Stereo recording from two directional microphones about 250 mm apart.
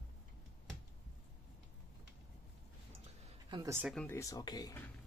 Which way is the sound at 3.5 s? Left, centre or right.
Centre.